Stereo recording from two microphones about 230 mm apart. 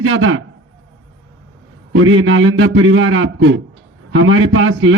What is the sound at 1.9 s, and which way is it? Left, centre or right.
A man's voice, right.